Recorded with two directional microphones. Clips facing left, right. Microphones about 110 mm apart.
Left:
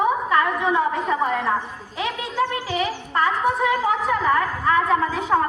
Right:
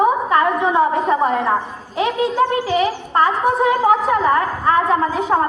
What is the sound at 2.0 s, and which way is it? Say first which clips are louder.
A woman's voice: right 7 dB; 30° right (ahead or behind).